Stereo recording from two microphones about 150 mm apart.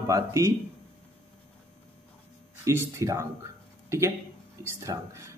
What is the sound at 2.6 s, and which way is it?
A man's voice, 20° right (ahead or behind).